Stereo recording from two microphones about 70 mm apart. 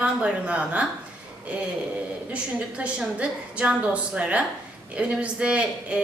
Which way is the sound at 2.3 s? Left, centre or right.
Centre.